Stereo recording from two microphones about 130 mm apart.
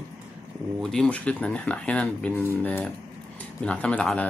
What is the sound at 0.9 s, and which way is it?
Speech, 10° left (ahead or behind).